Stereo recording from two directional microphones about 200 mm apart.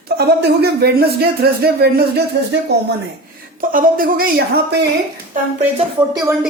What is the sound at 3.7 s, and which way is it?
Speech, 45° right (ahead or behind).